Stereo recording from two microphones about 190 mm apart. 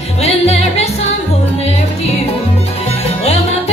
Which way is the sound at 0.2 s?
35° left (ahead or behind).